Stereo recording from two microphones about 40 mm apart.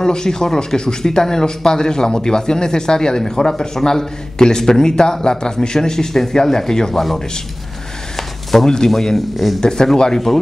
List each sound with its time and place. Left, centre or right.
0.0 s speech: centre
8.5 s speech: centre
9.6 s speech: centre